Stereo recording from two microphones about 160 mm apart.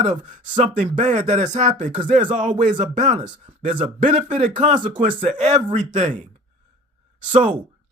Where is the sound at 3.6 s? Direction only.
30° right (ahead or behind).